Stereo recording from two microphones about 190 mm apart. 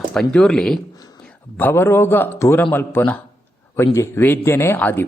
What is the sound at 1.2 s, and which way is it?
A man's voice, 5° left (ahead or behind).